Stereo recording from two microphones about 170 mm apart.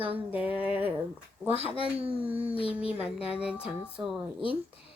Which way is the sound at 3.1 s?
35° left (ahead or behind).